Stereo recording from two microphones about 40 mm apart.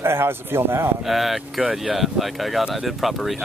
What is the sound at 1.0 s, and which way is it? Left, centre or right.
Speech, centre.